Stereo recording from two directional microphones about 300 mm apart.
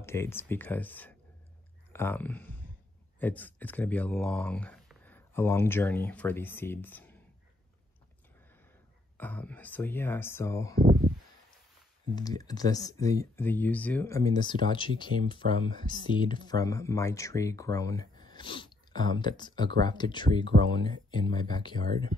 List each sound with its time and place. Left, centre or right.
0.0 s speech: centre
9.2 s speech: centre
10.8 s a sound: right
12.2 s speech: centre